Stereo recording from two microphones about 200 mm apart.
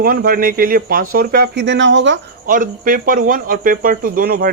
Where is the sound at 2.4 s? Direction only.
40° right (ahead or behind).